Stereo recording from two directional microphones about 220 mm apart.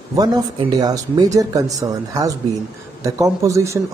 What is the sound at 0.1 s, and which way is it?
A man's voice, 15° right (ahead or behind).